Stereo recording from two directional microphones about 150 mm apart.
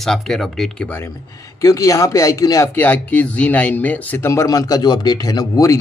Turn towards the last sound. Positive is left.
turn(degrees=20)  # may be behind; listen again after turning